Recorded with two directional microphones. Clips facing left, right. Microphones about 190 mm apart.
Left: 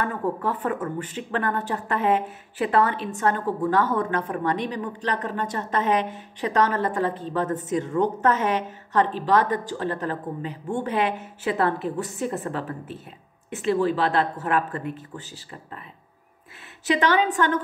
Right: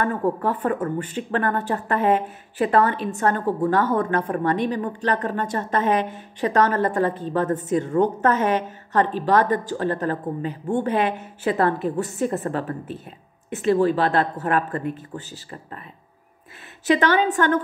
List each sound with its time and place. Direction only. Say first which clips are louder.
0.0 s a woman's voice: right 4 dB; 45° right (ahead or behind)
16.8 s a woman's voice: right 2 dB; 50° right (ahead or behind)